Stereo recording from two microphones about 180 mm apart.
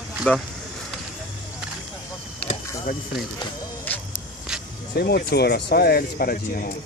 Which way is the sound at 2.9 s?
55° left (ahead or behind).